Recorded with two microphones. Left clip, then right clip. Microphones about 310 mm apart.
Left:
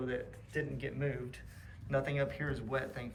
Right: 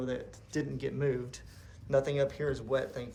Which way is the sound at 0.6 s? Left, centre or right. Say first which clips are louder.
Right 6 dB; right.